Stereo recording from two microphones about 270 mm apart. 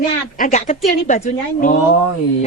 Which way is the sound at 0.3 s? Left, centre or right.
Left.